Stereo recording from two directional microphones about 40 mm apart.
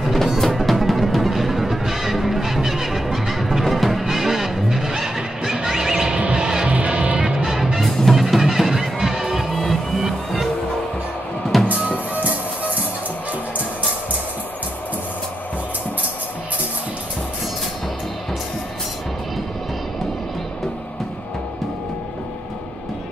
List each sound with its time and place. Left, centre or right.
0.0 s music: centre
6.1 s music: right
6.4 s music: centre
6.9 s music: right
7.2 s music: centre
7.9 s music: centre
8.2 s music: centre
11.6 s music: right